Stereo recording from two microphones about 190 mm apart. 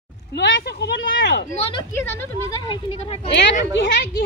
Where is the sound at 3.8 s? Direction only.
60° left (ahead or behind).